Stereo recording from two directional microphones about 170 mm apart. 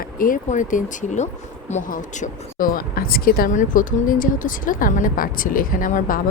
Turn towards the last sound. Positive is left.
turn(degrees=55)  # may be behind; listen again after turning